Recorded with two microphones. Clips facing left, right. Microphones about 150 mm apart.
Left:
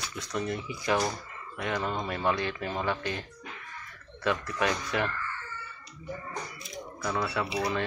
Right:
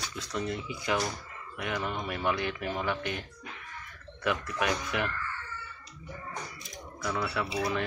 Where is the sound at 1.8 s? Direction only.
30° left (ahead or behind).